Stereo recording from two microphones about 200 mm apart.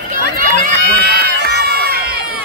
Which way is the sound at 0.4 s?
45° right (ahead or behind).